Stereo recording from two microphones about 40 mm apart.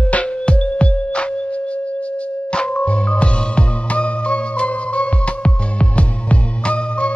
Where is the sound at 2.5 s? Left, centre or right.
Left.